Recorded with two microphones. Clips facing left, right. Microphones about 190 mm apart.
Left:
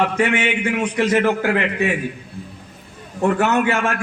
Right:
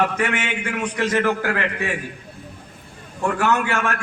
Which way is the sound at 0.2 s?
25° left (ahead or behind).